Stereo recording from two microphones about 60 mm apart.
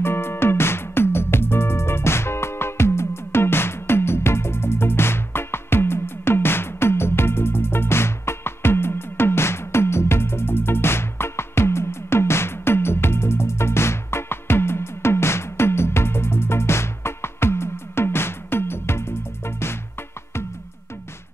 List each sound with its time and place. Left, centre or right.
0.0 s music: left